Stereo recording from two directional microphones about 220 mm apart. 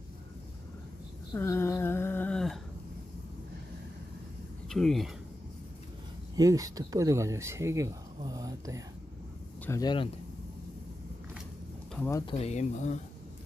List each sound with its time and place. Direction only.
1.3 s speech: 10° left (ahead or behind)
4.7 s speech: centre (ahead or behind)
6.3 s speech: 15° right (ahead or behind)
9.6 s speech: 15° left (ahead or behind)
11.9 s speech: 10° left (ahead or behind)
12.2 s speech: 25° left (ahead or behind)